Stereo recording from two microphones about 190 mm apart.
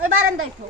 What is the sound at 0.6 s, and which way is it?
Speech, 40° right (ahead or behind).